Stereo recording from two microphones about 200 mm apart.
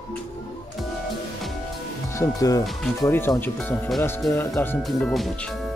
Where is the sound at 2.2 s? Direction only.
15° left (ahead or behind); by 5.3 s centre (ahead or behind).